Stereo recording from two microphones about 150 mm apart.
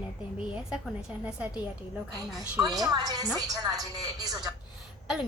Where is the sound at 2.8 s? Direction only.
25° right (ahead or behind).